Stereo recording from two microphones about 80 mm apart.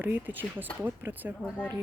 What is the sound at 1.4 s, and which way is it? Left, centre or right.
Speech, centre.